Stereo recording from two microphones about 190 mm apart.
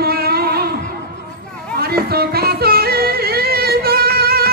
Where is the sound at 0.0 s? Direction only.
55° right (ahead or behind).